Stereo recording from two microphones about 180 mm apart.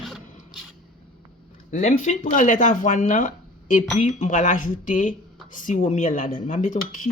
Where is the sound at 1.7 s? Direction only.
45° left (ahead or behind).